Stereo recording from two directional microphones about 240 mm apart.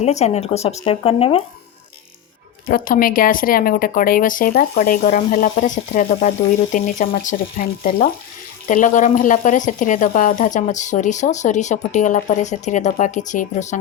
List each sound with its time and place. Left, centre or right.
0.0 s speech: left
2.6 s speech: left